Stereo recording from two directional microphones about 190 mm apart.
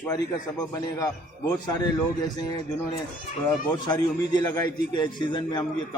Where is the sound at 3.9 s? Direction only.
20° left (ahead or behind).